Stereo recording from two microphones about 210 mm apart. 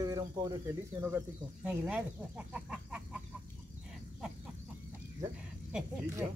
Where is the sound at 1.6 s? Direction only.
5° right (ahead or behind).